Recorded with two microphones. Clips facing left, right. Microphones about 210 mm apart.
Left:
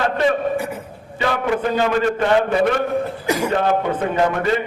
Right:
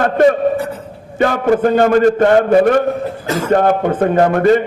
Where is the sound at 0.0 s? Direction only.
45° right (ahead or behind).